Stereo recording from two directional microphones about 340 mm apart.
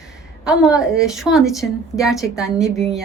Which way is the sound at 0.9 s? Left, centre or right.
Centre.